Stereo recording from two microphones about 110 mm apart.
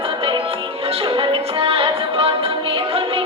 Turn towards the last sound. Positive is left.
turn(degrees=-55)  # may be behind; listen again after turning